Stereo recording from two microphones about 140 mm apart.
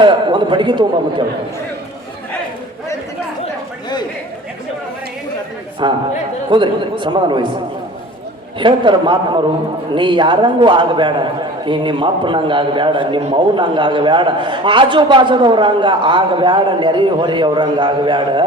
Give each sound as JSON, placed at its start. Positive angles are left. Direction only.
{"t": 0.0, "sound": "a man's voice", "side_deg": -35}
{"t": 5.8, "sound": "a man's voice", "side_deg": -35}
{"t": 8.5, "sound": "a man's voice", "side_deg": -35}